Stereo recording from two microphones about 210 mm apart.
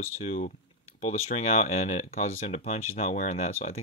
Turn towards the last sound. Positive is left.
turn(degrees=30)  # may be behind; listen again after turning